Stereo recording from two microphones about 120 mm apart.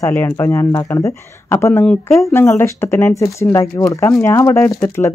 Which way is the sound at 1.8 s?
5° left (ahead or behind).